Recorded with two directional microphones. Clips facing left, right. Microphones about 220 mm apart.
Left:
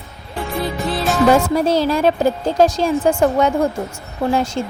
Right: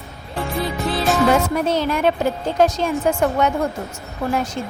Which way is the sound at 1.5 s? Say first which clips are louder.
Left 4 dB; 35° left (ahead or behind).